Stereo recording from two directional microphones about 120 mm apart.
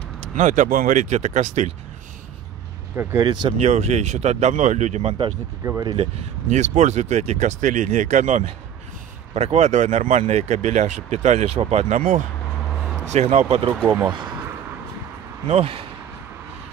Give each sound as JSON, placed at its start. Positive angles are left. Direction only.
{"t": 0.4, "sound": "speech", "side_deg": -90}
{"t": 3.0, "sound": "speech", "side_deg": -20}
{"t": 3.6, "sound": "speech", "side_deg": -65}
{"t": 5.6, "sound": "speech", "side_deg": -25}
{"t": 6.5, "sound": "speech", "side_deg": -75}
{"t": 9.3, "sound": "speech", "side_deg": -65}
{"t": 13.8, "sound": "speech", "side_deg": -15}
{"t": 15.4, "sound": "speech", "side_deg": -50}